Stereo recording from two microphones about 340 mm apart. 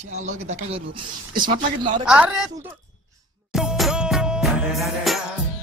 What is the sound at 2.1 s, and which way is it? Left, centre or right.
Music, centre.